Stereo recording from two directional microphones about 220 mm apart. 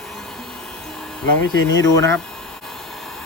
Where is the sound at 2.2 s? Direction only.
Centre (ahead or behind).